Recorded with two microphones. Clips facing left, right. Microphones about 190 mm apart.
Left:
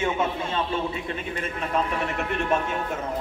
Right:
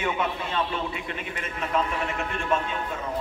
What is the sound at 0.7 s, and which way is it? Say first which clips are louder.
Speech: left 3 dB; 30° left (ahead or behind).